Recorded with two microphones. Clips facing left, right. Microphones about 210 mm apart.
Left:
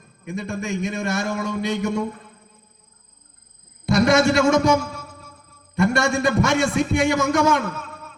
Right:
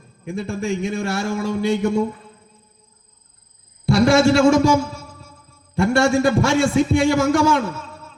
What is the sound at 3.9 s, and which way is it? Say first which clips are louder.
Speech: right 3 dB; 25° right (ahead or behind).